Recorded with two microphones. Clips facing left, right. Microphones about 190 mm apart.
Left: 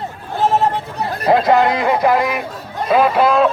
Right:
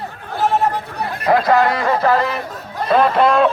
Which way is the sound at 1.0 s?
20° left (ahead or behind).